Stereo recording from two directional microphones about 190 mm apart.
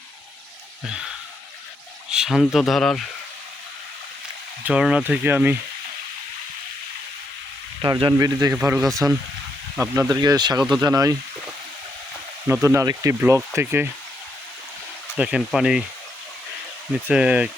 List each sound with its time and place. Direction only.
0.9 s speech: 5° right (ahead or behind)
4.6 s speech: 5° right (ahead or behind)
7.8 s speech: 25° right (ahead or behind)
12.6 s speech: 15° right (ahead or behind)
15.2 s speech: 5° right (ahead or behind)
16.9 s speech: 5° right (ahead or behind)